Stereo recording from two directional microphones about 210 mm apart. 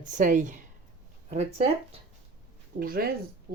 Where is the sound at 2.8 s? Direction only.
45° right (ahead or behind).